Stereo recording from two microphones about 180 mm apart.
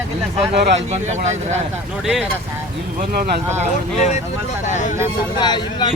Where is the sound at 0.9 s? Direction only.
40° right (ahead or behind).